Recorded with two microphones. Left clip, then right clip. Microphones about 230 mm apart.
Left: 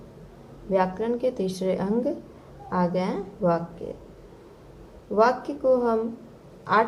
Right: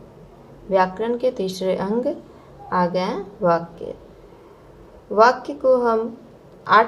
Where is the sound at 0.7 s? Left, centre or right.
Right.